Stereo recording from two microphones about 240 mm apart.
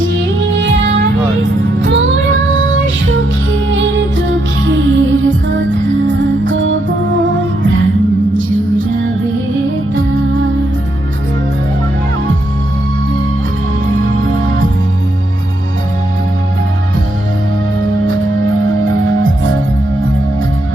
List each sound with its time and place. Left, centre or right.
0.0 s music: right
13.8 s music: right
18.6 s music: right